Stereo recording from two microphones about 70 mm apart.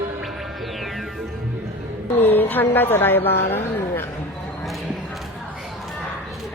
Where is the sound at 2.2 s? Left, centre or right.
Left.